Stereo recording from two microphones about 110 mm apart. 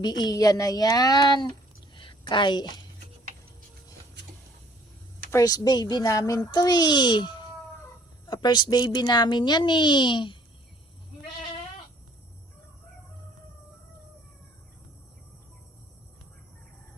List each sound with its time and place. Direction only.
0.0 s speech: 40° left (ahead or behind)
5.3 s a child's voice: 30° left (ahead or behind)